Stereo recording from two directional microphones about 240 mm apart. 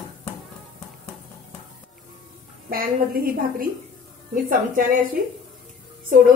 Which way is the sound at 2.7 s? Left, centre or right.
Right.